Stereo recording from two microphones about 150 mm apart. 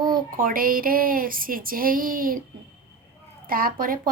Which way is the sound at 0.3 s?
70° right (ahead or behind).